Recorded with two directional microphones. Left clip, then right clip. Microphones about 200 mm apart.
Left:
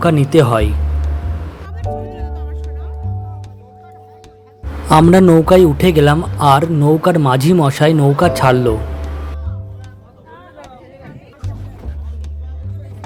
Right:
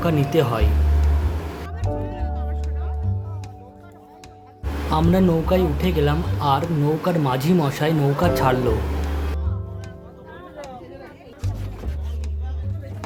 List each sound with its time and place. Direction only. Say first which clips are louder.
0.0 s speech: left 8 dB; 30° left (ahead or behind)
2.1 s music: left 1 dB; 60° left (ahead or behind)
4.9 s a man's voice: left 12 dB; 45° left (ahead or behind)